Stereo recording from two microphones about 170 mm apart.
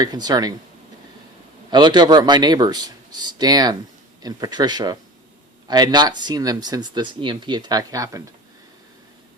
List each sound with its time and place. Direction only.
0.0 s speech: 25° right (ahead or behind)
1.7 s speech: 25° right (ahead or behind)